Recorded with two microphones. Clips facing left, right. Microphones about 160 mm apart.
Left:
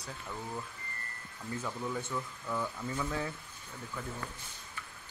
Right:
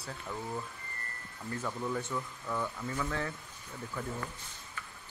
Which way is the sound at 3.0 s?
15° left (ahead or behind).